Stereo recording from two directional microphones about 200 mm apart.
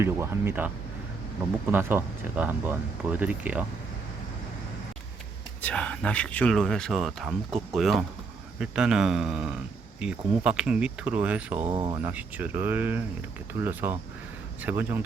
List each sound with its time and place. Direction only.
0.0 s speech: 10° right (ahead or behind)
1.7 s speech: 10° right (ahead or behind)
5.6 s speech: 5° left (ahead or behind)
11.7 s speech: 20° right (ahead or behind)
12.0 s speech: 10° right (ahead or behind)